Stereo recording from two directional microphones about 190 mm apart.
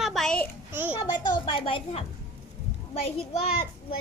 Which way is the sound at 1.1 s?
25° left (ahead or behind).